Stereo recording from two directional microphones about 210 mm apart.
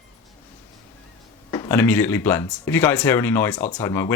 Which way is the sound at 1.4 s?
10° left (ahead or behind).